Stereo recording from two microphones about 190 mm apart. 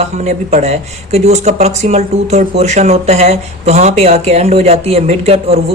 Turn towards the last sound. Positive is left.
turn(degrees=-30)  # may be behind; listen again after turning